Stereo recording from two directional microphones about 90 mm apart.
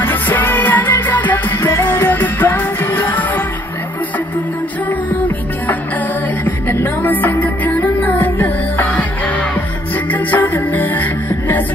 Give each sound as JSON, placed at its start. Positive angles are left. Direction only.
{"t": 0.0, "sound": "music", "side_deg": 20}
{"t": 6.4, "sound": "music", "side_deg": 20}
{"t": 10.1, "sound": "music", "side_deg": 20}